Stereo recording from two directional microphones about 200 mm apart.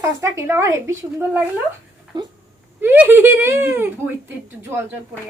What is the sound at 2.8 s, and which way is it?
A woman's voice, 10° right (ahead or behind).